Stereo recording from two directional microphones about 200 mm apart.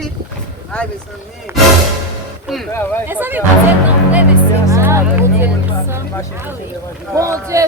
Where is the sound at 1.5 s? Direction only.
10° right (ahead or behind).